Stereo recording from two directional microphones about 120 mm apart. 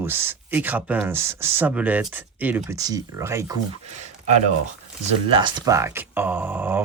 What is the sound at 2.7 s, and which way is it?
Speech, 30° right (ahead or behind).